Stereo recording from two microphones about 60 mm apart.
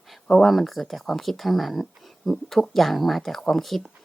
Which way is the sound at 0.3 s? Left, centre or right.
Centre.